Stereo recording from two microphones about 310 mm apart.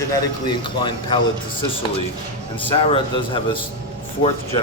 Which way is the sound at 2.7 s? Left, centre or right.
Centre.